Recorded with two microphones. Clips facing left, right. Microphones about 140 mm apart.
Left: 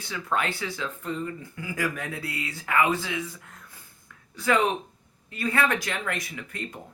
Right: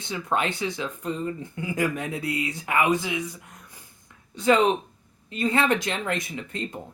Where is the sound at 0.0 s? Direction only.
20° right (ahead or behind).